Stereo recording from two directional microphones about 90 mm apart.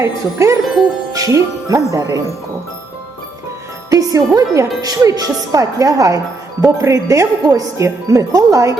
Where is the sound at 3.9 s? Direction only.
40° right (ahead or behind).